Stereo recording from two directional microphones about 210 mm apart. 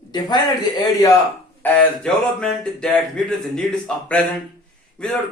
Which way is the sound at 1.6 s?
5° left (ahead or behind).